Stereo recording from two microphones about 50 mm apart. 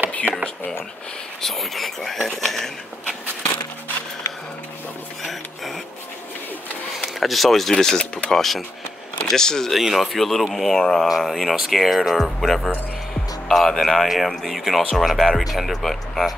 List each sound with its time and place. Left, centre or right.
0.3 s speech: right
1.4 s speech: centre
7.0 s speech: centre
9.7 s speech: centre
11.1 s speech: centre